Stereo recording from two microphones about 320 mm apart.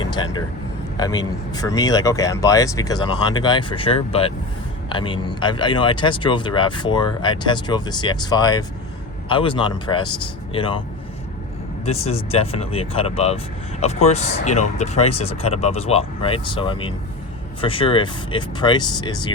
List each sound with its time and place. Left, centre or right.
0.0 s speech: centre
11.9 s speech: centre